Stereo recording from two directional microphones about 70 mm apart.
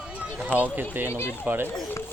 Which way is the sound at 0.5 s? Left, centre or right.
Left.